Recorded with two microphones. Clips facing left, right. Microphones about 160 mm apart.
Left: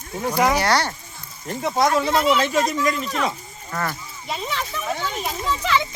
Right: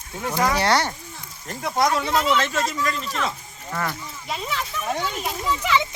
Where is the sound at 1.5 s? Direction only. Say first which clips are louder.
Left 2 dB; 5° left (ahead or behind).